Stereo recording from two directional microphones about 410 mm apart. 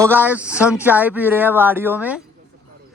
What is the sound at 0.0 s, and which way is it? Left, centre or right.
Speech, centre.